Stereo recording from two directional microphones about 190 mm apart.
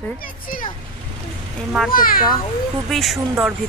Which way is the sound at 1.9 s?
50° left (ahead or behind).